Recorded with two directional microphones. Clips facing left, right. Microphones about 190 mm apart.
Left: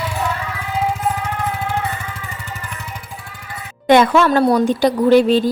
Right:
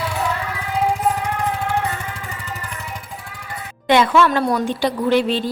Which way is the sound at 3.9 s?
45° left (ahead or behind).